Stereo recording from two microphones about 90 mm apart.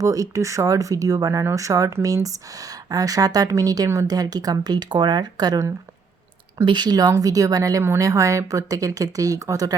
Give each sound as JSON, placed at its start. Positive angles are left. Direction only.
{"t": 0.0, "sound": "speech", "side_deg": -40}
{"t": 6.7, "sound": "speech", "side_deg": -55}